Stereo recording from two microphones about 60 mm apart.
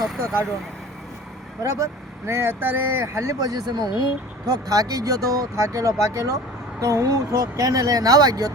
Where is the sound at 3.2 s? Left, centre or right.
Right.